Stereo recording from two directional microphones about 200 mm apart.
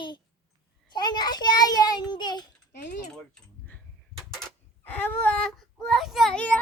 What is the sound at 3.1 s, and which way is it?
Keys jangling, 10° left (ahead or behind).